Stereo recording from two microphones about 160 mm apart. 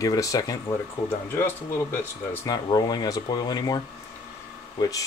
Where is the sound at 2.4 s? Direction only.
25° left (ahead or behind).